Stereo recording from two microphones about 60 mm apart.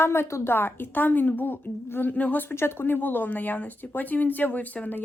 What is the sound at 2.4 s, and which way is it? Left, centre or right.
Speech, left.